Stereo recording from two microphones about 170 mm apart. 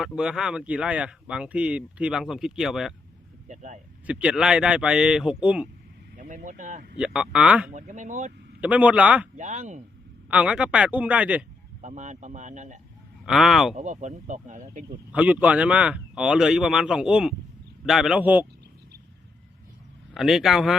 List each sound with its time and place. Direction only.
0.0 s speech: 5° right (ahead or behind)
3.5 s speech: 45° right (ahead or behind)
4.0 s speech: 5° right (ahead or behind)
6.1 s speech: 50° right (ahead or behind)
7.0 s speech: 5° right (ahead or behind)
7.7 s speech: 45° right (ahead or behind)
8.6 s a man's voice: 10° right (ahead or behind)
9.4 s speech: 45° right (ahead or behind)
10.2 s a man's voice: 5° right (ahead or behind)
11.8 s speech: 45° right (ahead or behind)
13.2 s speech: centre (ahead or behind)
13.7 s speech: 45° right (ahead or behind)
15.1 s speech: 10° right (ahead or behind)
20.1 s speech: centre (ahead or behind)